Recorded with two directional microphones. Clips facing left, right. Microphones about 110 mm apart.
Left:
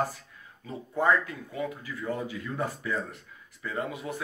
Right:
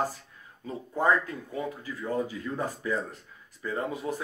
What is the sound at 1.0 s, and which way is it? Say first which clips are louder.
Speech: even; 35° right (ahead or behind).